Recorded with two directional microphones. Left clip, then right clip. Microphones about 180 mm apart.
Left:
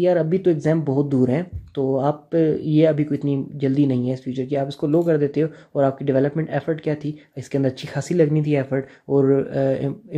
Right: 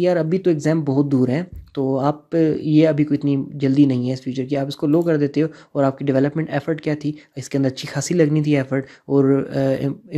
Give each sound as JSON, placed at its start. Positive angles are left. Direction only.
{"t": 0.0, "sound": "speech", "side_deg": -30}